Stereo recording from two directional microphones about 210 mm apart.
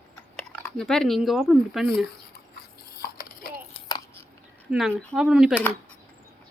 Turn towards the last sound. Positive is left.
turn(degrees=5)  # may be behind; listen again after turning